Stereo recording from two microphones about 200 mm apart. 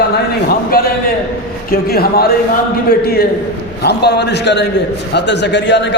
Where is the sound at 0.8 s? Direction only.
50° left (ahead or behind).